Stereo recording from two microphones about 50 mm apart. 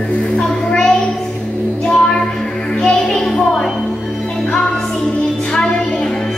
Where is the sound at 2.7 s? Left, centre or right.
Centre.